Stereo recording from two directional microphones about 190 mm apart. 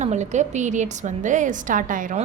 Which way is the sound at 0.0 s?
40° right (ahead or behind).